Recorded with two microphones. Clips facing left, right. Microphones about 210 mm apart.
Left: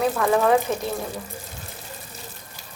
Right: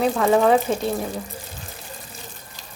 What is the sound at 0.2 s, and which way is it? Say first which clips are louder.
Speech: right 3 dB; 25° right (ahead or behind).